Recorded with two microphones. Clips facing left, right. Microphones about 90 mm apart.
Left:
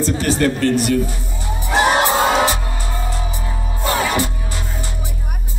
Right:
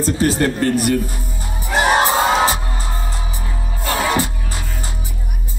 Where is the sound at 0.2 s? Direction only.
40° right (ahead or behind).